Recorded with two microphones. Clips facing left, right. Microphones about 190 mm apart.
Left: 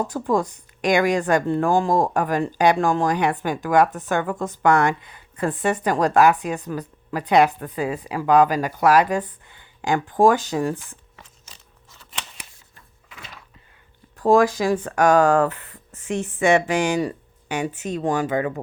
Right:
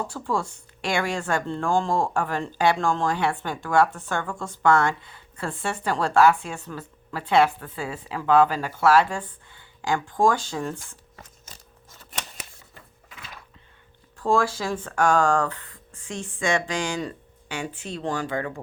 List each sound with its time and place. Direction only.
0.1 s speech: 20° left (ahead or behind)
11.2 s a sound: 45° right (ahead or behind)
14.3 s speech: 15° left (ahead or behind)